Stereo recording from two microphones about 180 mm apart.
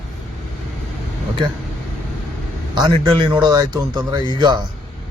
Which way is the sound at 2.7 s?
25° right (ahead or behind).